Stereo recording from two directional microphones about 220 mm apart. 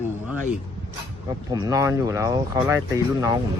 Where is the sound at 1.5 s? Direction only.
15° right (ahead or behind).